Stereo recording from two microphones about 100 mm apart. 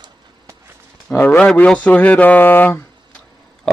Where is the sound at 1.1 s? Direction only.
20° left (ahead or behind).